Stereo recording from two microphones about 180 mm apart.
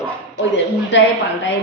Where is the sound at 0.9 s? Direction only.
90° left.